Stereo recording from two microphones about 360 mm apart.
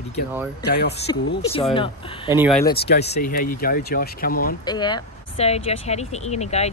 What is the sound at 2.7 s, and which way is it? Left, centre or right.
Speech, left.